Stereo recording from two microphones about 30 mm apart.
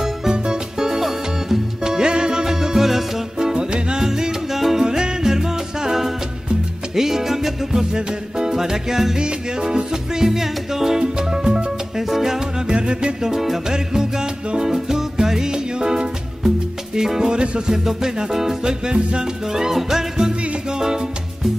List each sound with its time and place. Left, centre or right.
0.3 s music: right
9.2 s music: right
10.2 s music: centre
11.0 s music: right
12.6 s music: right
13.3 s music: centre
17.3 s music: right
17.8 s music: centre
18.6 s music: right
19.7 s music: centre